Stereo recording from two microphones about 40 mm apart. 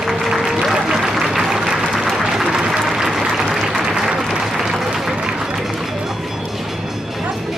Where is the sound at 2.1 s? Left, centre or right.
Centre.